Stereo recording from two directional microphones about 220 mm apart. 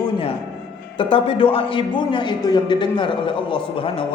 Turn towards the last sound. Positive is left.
turn(degrees=25)  # may be behind; listen again after turning